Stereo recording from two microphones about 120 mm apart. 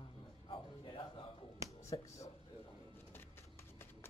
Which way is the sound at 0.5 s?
45° left (ahead or behind).